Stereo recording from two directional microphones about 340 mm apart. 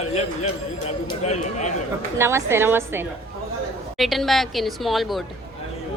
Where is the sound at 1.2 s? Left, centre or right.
Centre.